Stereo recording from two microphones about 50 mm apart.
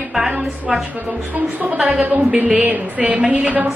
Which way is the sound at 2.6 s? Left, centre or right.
Right.